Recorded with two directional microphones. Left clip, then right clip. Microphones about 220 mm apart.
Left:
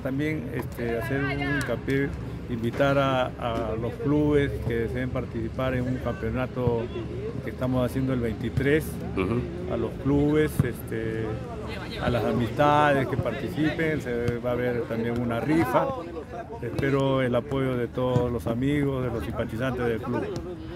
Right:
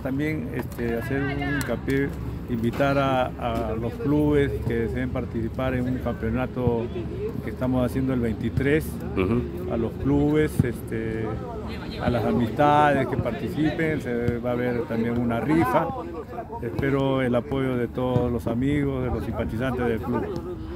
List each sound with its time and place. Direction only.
0.0 s speech: centre (ahead or behind)
1.2 s speech: 25° left (ahead or behind)
1.7 s speech: centre (ahead or behind)
16.8 s speech: centre (ahead or behind)